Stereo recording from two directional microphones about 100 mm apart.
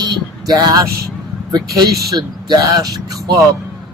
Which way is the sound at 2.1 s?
45° right (ahead or behind).